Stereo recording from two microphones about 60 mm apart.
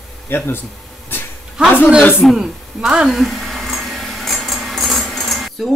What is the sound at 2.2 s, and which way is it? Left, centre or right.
Speech, centre.